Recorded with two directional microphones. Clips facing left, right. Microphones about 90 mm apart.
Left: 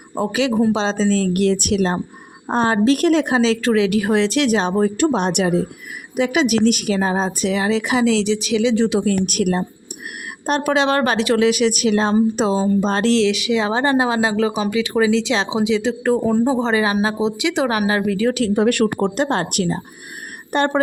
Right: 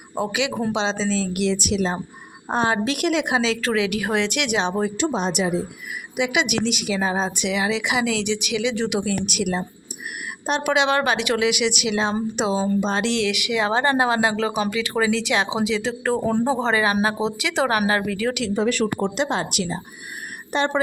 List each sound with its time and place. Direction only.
0.2 s a woman's voice: 35° left (ahead or behind); by 2.0 s 55° left (ahead or behind)
2.6 s a woman's voice: 35° left (ahead or behind); by 5.6 s 60° left (ahead or behind)
6.1 s a woman's voice: 40° left (ahead or behind)
9.0 s a woman's voice: 45° left (ahead or behind)
13.2 s a woman's voice: 25° left (ahead or behind)
18.4 s speech: 55° left (ahead or behind)
18.9 s speech: 45° left (ahead or behind)